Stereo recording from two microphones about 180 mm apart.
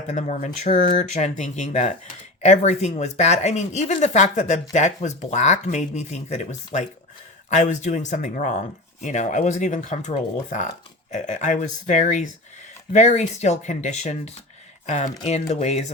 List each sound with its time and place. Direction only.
0.1 s speech: 40° left (ahead or behind)